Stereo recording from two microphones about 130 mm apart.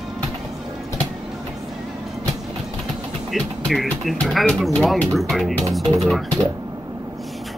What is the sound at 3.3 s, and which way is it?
Speech, centre (ahead or behind).